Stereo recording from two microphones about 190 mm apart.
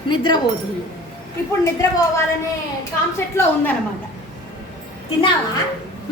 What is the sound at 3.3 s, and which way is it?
Speech, 10° left (ahead or behind).